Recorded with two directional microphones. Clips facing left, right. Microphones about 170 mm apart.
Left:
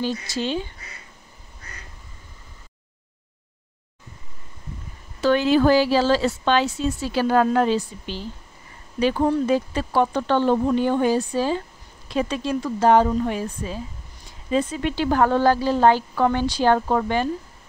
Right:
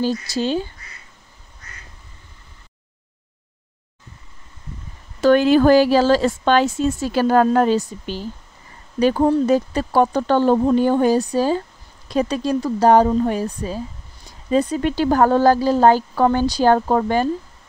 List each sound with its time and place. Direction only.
0.0 s a woman's voice: 35° right (ahead or behind)
5.2 s a woman's voice: 50° right (ahead or behind)